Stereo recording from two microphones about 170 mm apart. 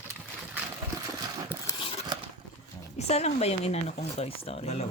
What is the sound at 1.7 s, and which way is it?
Crumpling, 30° left (ahead or behind).